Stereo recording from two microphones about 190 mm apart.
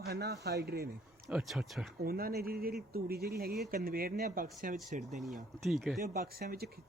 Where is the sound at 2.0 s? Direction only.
50° right (ahead or behind).